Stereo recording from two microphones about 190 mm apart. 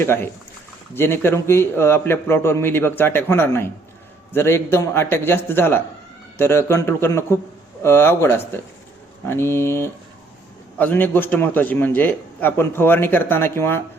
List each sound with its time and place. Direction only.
0.0 s a man's voice: 10° left (ahead or behind)